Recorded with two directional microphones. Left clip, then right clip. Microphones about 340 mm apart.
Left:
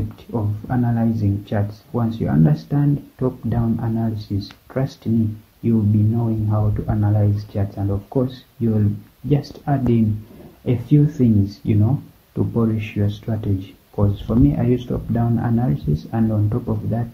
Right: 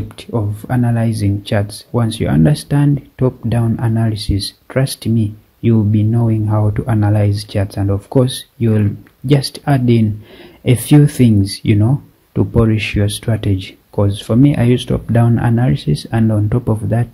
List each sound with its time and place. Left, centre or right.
0.3 s speech: right